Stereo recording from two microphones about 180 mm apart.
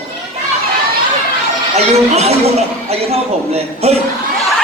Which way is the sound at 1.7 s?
35° right (ahead or behind).